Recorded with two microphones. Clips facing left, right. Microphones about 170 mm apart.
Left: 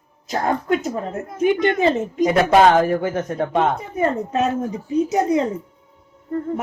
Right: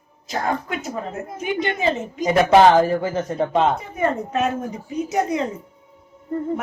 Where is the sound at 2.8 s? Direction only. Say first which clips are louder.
Left 1 dB; 15° left (ahead or behind).